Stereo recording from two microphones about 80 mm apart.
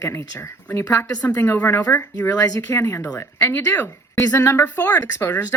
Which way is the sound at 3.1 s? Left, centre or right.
Left.